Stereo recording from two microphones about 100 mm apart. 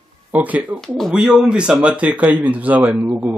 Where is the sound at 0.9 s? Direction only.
5° right (ahead or behind).